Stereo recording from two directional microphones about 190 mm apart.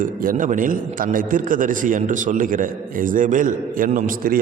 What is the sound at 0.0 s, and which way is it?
A man's voice, 45° right (ahead or behind).